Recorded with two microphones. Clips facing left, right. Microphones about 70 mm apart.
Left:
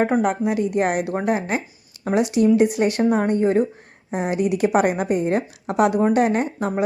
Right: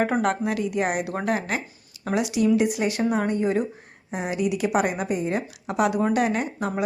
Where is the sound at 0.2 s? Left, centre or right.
Centre.